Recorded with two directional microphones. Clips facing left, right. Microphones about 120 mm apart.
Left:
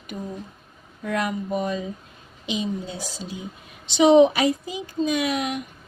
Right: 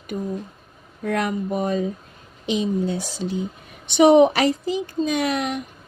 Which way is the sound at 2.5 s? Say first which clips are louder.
Right 6 dB; 60° right (ahead or behind).